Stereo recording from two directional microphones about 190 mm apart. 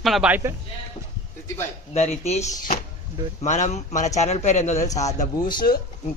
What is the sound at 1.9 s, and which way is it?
Speech, 35° left (ahead or behind).